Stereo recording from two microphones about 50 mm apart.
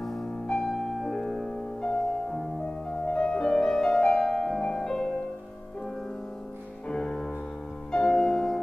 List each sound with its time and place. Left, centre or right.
0.0 s music: centre
6.9 s music: centre